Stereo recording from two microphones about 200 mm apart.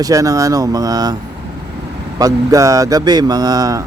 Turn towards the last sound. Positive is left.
turn(degrees=-20)  # may be behind; listen again after turning